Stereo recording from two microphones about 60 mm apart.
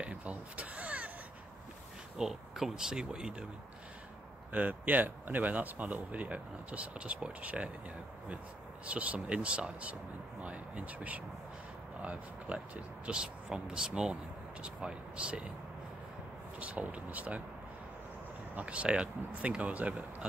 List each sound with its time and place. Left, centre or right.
0.0 s a sound: right
2.1 s speech: centre
4.5 s speech: right
8.8 s speech: right
16.5 s speech: right
18.5 s speech: right